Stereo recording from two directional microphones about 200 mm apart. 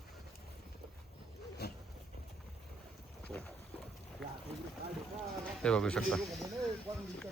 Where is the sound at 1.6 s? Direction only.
55° left (ahead or behind).